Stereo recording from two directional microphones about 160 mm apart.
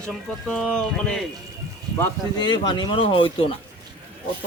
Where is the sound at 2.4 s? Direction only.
30° left (ahead or behind).